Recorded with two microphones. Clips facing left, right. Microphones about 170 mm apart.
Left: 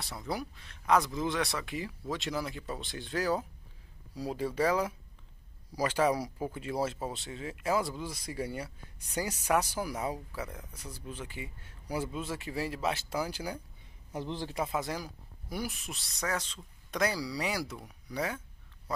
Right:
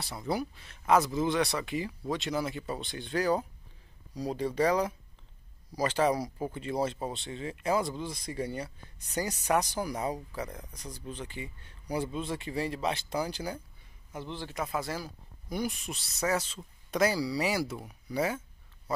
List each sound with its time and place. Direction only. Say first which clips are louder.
0.0 s speech: right 4 dB; centre (ahead or behind)
14.1 s a man's voice: left 2 dB; 35° left (ahead or behind)
14.6 s speech: right 1 dB; 15° left (ahead or behind)
15.5 s speech: right 4 dB; 5° left (ahead or behind)